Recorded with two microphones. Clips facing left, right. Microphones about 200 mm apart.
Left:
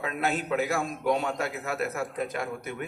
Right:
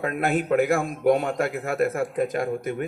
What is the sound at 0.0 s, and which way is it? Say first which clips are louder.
A man's voice: right 5 dB; 50° right (ahead or behind).